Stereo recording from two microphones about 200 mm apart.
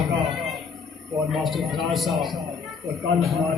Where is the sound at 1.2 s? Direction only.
Centre (ahead or behind).